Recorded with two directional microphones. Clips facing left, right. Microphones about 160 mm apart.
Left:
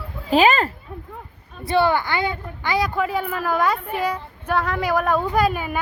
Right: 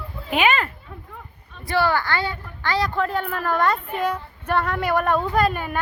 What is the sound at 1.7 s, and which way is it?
Speech, 20° left (ahead or behind).